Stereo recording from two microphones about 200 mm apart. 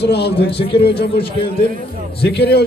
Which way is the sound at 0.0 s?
55° left (ahead or behind).